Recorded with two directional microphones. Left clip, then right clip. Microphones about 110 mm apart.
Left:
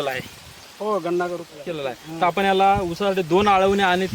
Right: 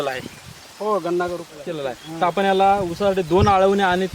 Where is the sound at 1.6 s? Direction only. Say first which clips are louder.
Right 1 dB; 5° left (ahead or behind).